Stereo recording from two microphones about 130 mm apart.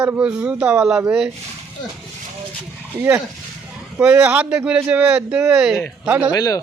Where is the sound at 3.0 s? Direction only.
15° right (ahead or behind).